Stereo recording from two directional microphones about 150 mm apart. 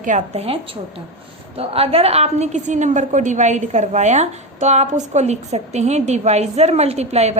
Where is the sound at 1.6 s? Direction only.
40° right (ahead or behind).